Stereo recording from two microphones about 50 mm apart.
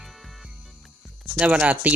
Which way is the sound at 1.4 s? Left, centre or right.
Right.